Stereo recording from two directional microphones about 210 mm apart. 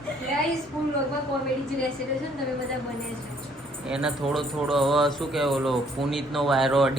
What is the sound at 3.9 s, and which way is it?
Speech, 5° right (ahead or behind).